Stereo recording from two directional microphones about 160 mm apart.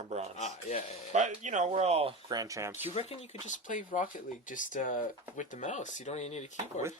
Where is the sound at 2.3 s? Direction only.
20° right (ahead or behind).